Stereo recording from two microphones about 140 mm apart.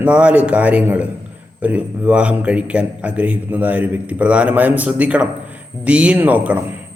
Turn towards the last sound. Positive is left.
turn(degrees=-10)  # may be behind; listen again after turning